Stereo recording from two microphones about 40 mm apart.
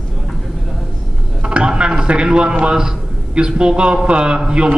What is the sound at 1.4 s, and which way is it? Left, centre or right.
A man's voice, right.